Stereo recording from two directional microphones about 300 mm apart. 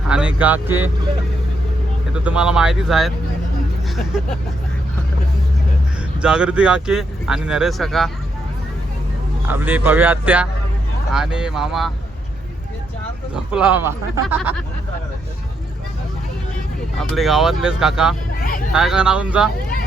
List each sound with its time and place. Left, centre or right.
0.1 s speech: centre
2.2 s speech: centre
6.2 s speech: centre
9.5 s speech: centre
13.3 s speech: centre
17.0 s speech: centre
18.3 s vehicle: left
18.7 s speech: centre